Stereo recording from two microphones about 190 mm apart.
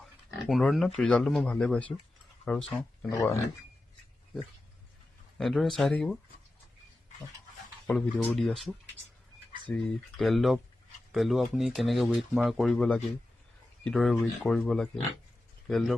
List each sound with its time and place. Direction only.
0.4 s speech: centre (ahead or behind)
3.1 s speech: 15° left (ahead or behind)
5.4 s speech: centre (ahead or behind)
7.9 s speech: 10° left (ahead or behind)